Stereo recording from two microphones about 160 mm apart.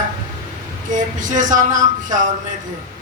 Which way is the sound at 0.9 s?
50° right (ahead or behind).